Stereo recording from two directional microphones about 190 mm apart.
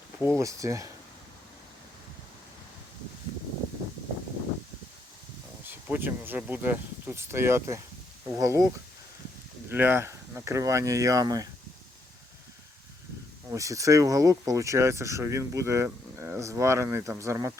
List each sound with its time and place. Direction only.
0.2 s speech: 15° right (ahead or behind)
5.6 s speech: 10° right (ahead or behind)
9.6 s speech: 10° right (ahead or behind)
13.5 s speech: 15° right (ahead or behind)